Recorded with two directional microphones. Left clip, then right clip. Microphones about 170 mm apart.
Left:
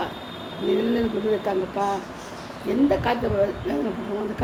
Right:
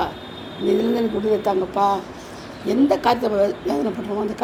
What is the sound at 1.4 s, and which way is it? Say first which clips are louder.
Speech: right 5 dB; 35° right (ahead or behind).